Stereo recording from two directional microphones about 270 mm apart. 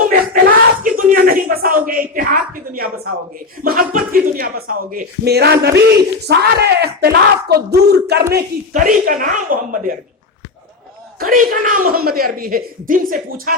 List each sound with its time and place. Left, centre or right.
0.4 s a sound: right
3.6 s speech: right
11.2 s a man's voice: right